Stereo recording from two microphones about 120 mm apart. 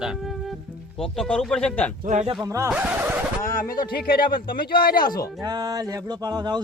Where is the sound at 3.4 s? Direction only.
30° left (ahead or behind).